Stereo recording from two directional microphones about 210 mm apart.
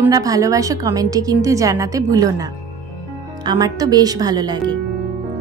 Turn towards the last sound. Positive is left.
turn(degrees=-20)  # may be behind; listen again after turning